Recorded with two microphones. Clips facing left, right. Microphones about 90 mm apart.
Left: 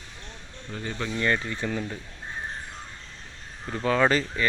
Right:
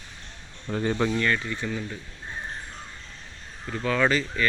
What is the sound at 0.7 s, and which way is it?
Speech, 45° right (ahead or behind).